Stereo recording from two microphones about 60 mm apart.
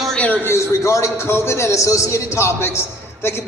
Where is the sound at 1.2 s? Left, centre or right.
Left.